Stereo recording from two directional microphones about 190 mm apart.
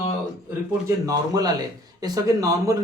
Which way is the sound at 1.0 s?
20° right (ahead or behind).